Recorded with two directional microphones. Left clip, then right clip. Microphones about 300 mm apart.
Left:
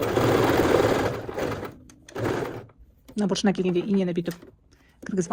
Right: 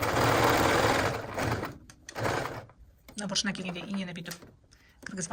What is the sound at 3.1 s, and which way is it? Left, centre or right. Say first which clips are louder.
Speech: left 7 dB; centre.